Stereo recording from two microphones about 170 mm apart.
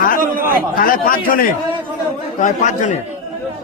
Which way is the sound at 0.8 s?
55° left (ahead or behind).